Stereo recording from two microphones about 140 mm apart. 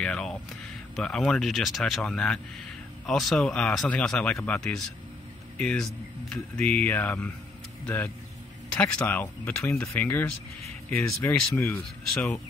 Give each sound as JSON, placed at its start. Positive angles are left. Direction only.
{"t": 0.0, "sound": "speech", "side_deg": 5}